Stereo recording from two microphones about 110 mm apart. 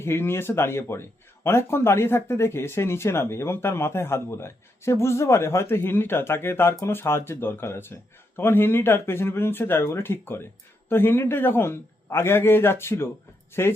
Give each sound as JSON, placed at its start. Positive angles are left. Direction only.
{"t": 0.0, "sound": "speech", "side_deg": 20}